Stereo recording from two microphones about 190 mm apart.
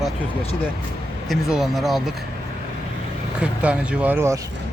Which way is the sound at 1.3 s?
Centre (ahead or behind).